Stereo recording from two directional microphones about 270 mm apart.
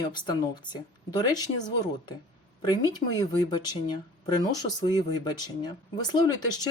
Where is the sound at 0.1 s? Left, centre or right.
Centre.